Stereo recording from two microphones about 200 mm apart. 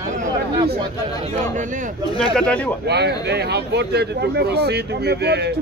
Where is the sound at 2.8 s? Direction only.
55° right (ahead or behind).